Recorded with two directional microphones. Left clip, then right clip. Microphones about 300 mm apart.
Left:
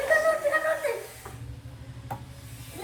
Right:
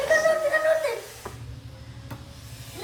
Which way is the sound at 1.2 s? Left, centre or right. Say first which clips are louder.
Right 5 dB; right.